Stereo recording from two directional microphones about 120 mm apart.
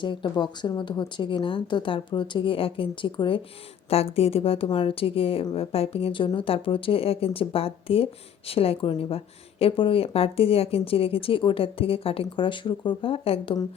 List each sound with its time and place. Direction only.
0.0 s speech: 40° left (ahead or behind)
3.8 s speech: 55° left (ahead or behind)